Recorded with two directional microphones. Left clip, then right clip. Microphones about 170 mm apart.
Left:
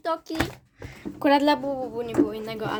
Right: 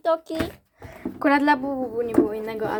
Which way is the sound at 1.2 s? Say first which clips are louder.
Right 1 dB; 10° left (ahead or behind).